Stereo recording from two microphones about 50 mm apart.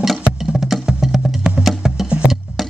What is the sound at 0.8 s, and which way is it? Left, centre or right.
Wood block, centre.